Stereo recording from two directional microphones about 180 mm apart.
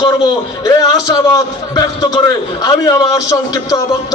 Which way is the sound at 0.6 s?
20° left (ahead or behind).